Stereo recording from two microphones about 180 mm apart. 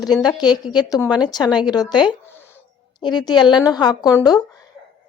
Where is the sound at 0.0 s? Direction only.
20° left (ahead or behind).